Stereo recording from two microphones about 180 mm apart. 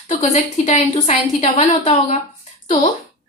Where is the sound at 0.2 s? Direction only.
40° left (ahead or behind).